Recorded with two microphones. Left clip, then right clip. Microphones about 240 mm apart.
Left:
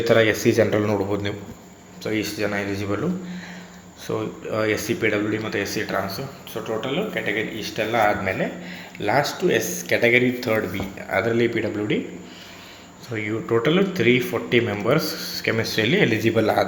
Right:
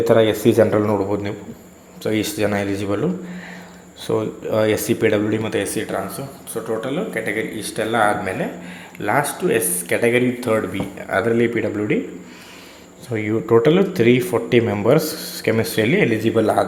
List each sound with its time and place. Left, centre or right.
0.1 s speech: centre
2.0 s speech: right
4.0 s speech: right
13.1 s speech: right